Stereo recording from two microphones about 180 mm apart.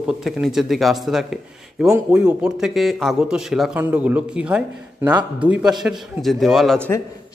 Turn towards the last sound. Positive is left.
turn(degrees=0)  # may be behind; listen again after turning